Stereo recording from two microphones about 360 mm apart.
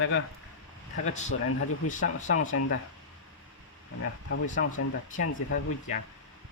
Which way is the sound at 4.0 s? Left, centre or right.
Left.